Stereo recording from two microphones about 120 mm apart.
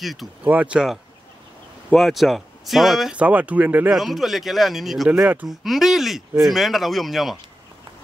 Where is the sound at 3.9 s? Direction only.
Centre (ahead or behind).